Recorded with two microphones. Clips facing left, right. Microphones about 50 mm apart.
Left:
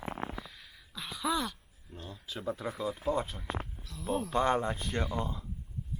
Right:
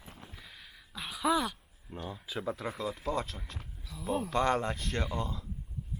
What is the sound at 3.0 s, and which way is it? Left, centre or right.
Speech, centre.